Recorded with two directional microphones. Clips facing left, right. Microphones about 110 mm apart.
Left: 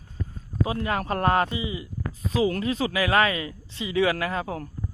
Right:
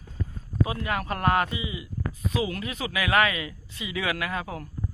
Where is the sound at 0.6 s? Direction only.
30° left (ahead or behind).